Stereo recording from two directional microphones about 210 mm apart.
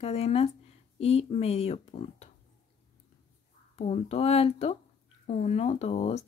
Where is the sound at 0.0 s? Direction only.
30° left (ahead or behind).